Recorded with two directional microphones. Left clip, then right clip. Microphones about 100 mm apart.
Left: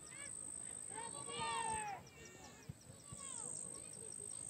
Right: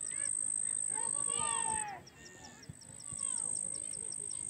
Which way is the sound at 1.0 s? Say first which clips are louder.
Right 4 dB; 25° left (ahead or behind).